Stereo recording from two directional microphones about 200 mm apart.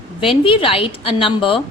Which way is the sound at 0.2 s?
25° left (ahead or behind).